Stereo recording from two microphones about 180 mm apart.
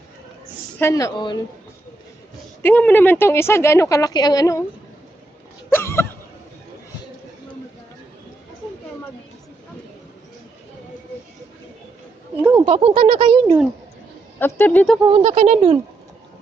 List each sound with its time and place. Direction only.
0.8 s a woman's voice: 15° left (ahead or behind)
2.6 s speech: 10° left (ahead or behind)
5.7 s a sound: 15° left (ahead or behind)
12.4 s a sound: 10° right (ahead or behind)
12.6 s speech: 35° right (ahead or behind)
14.3 s speech: 10° left (ahead or behind)
15.0 s speech: 35° right (ahead or behind)